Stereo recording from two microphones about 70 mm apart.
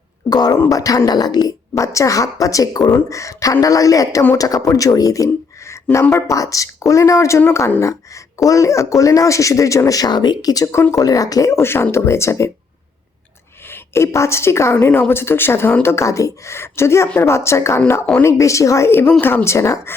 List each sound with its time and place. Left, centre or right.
0.3 s speech: left
0.7 s speech: left
1.7 s speech: left
11.5 s a woman's voice: left
13.7 s a woman's voice: left
19.2 s a woman's voice: left
19.5 s speech: left